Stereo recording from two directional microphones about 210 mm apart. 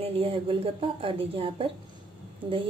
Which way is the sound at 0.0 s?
25° right (ahead or behind).